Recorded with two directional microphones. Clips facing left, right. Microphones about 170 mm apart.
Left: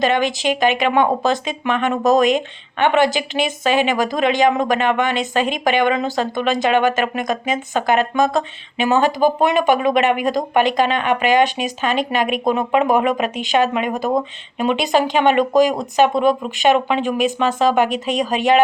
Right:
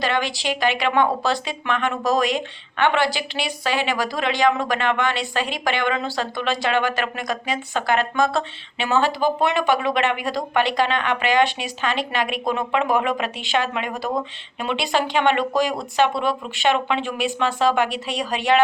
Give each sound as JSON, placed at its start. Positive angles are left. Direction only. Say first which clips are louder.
{"t": 0.0, "sound": "a woman's voice", "louder": "left 6 dB", "side_deg": 20}